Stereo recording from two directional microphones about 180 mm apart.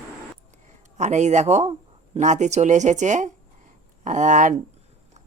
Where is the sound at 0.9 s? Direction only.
40° right (ahead or behind).